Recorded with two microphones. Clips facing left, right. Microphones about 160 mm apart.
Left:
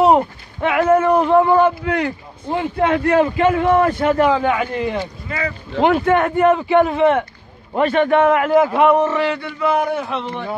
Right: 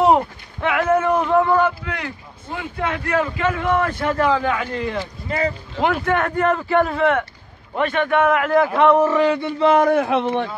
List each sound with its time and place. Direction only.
0.0 s a sound: 15° left (ahead or behind)
1.2 s a man's voice: 20° left (ahead or behind)
1.9 s a man's voice: 40° left (ahead or behind); by 6.6 s 10° left (ahead or behind)
6.9 s a man's voice: 20° left (ahead or behind)
7.7 s a man's voice: 35° left (ahead or behind)
8.2 s a man's voice: 25° left (ahead or behind)
8.5 s speech: 15° left (ahead or behind)
9.0 s speech: 10° right (ahead or behind)
9.4 s a man's voice: 30° right (ahead or behind)
9.8 s a man's voice: 55° right (ahead or behind)